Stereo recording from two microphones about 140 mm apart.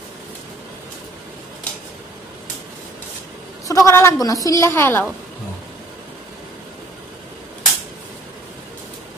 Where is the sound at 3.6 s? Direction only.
20° left (ahead or behind).